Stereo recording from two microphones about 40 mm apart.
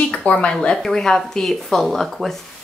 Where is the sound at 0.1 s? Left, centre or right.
Left.